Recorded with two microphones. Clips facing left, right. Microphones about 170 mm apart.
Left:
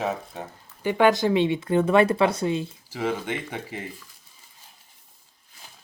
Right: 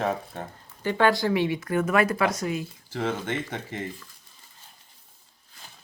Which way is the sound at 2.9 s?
10° left (ahead or behind).